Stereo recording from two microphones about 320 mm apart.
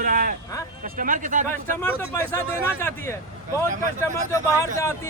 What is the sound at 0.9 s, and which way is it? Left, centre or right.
Speech, right.